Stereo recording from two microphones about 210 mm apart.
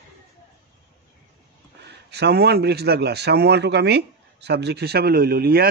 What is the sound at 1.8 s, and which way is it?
A man's voice, 50° right (ahead or behind).